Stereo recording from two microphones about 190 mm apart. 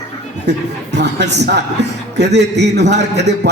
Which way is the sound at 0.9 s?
65° right (ahead or behind).